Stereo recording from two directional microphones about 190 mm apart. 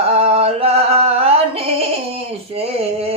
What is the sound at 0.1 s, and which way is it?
Music, 30° right (ahead or behind).